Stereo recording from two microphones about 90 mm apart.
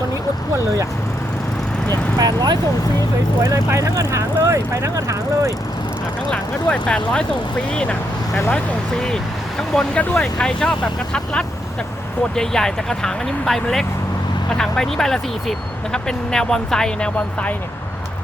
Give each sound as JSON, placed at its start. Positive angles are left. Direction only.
{"t": 1.9, "sound": "speech", "side_deg": -50}
{"t": 3.4, "sound": "speech", "side_deg": -35}
{"t": 6.3, "sound": "speech", "side_deg": 10}
{"t": 9.6, "sound": "speech", "side_deg": 5}